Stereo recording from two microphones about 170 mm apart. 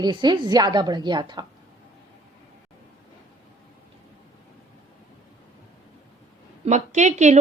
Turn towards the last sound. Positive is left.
turn(degrees=-45)  # may be behind; listen again after turning